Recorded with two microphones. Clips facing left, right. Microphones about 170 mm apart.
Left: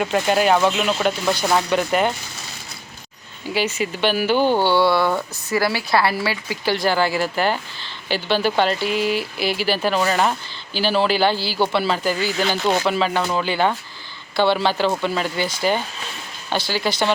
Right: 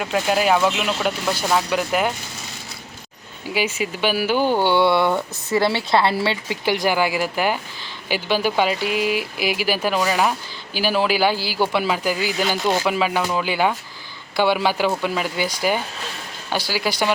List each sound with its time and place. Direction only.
0.0 s speech: centre (ahead or behind)
3.5 s speech: 10° right (ahead or behind)
4.6 s speech: 20° right (ahead or behind)